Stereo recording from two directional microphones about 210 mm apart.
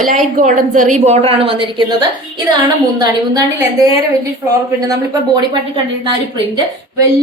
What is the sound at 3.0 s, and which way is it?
Speech, 15° right (ahead or behind).